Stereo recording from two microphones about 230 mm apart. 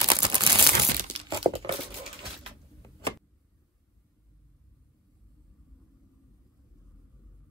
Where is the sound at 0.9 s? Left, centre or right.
Right.